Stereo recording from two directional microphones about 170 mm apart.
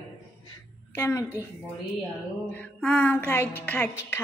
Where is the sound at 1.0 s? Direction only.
10° left (ahead or behind).